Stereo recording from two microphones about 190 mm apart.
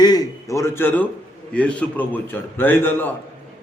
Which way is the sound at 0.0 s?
20° left (ahead or behind).